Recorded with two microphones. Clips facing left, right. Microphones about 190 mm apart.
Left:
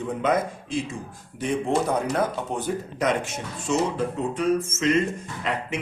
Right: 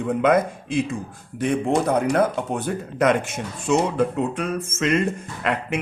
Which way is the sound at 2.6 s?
60° right (ahead or behind).